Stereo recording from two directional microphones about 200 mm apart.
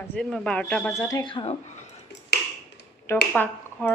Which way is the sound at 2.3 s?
60° left (ahead or behind).